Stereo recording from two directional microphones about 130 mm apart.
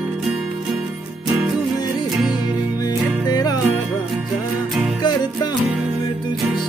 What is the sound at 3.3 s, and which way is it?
Music, 30° left (ahead or behind).